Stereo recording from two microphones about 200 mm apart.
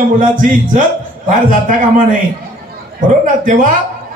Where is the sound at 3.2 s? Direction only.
40° right (ahead or behind).